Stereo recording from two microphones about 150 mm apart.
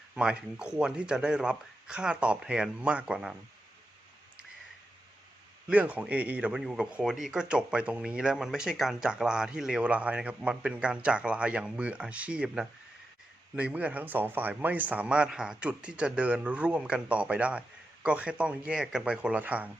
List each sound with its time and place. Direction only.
0.1 s speech: 5° right (ahead or behind)
5.6 s speech: 10° right (ahead or behind)